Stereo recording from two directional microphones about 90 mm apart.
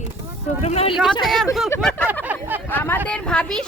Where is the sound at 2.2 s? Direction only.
20° right (ahead or behind).